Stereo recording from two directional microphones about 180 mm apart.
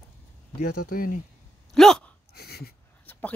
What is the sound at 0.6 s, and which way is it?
Speech, 55° left (ahead or behind).